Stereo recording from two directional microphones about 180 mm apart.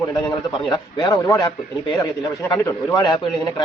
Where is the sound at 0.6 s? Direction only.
20° left (ahead or behind).